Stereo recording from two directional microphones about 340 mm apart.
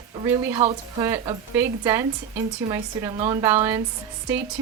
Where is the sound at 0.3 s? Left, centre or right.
Centre.